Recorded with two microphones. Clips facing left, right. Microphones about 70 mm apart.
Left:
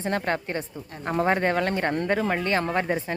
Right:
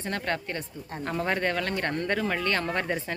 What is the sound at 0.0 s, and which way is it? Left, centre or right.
Speech, left.